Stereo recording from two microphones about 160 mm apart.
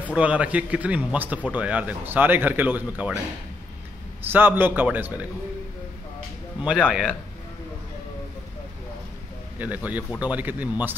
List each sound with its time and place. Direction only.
0.0 s a man's voice: 10° right (ahead or behind)
4.2 s a man's voice: 10° right (ahead or behind)
6.8 s speech: 5° right (ahead or behind)
9.6 s a man's voice: 10° right (ahead or behind)